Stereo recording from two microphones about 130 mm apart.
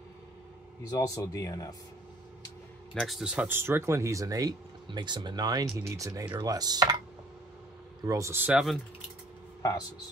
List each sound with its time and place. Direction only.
0.8 s speech: 25° left (ahead or behind)
2.9 s speech: centre (ahead or behind); by 6.2 s 25° right (ahead or behind)
6.3 s chopping: 30° right (ahead or behind)
8.0 s speech: 25° right (ahead or behind)
8.5 s speech: 5° right (ahead or behind)
9.6 s speech: 25° left (ahead or behind)